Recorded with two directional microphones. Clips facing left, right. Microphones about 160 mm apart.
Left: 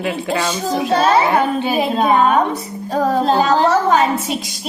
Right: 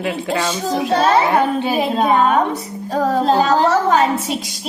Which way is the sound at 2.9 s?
15° left (ahead or behind).